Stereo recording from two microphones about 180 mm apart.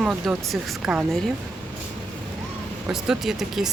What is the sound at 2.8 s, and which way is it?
Speech, 5° right (ahead or behind).